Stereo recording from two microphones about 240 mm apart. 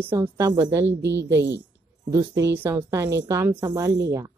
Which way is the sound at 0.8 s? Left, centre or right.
Right.